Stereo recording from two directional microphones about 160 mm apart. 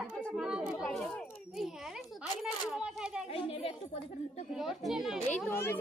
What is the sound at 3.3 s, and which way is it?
Speech, 35° left (ahead or behind).